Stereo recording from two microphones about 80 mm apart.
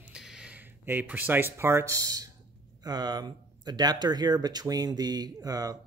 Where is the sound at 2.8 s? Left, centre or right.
Right.